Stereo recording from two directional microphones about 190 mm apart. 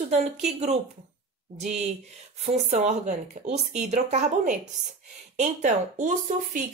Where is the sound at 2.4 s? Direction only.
40° right (ahead or behind).